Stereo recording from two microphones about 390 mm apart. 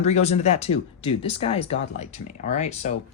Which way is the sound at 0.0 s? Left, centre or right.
Centre.